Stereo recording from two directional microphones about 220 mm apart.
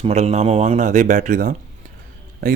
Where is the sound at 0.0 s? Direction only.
30° right (ahead or behind).